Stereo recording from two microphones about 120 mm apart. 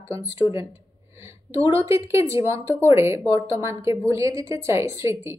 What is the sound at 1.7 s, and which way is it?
A woman's voice, 25° right (ahead or behind).